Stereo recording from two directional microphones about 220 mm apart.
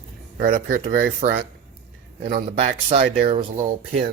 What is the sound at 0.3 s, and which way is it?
Speech, 35° right (ahead or behind).